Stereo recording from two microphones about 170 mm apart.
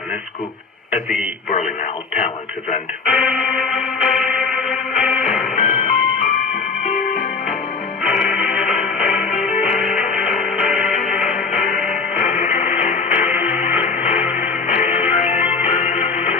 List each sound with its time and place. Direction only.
0.9 s a man's voice: centre (ahead or behind)
1.5 s speech: 45° left (ahead or behind)
3.1 s music: centre (ahead or behind)
5.5 s music: 40° left (ahead or behind)
8.0 s music: 5° right (ahead or behind)
11.3 s music: 50° left (ahead or behind)